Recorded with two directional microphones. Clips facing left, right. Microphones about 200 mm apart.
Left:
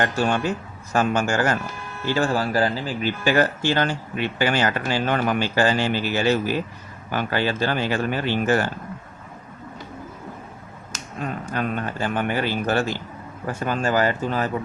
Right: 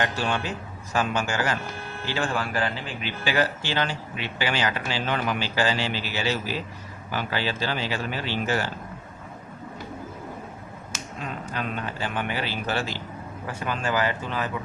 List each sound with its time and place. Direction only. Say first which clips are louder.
0.0 s speech: left 5 dB; 45° left (ahead or behind)
11.2 s speech: left 6 dB; 50° left (ahead or behind)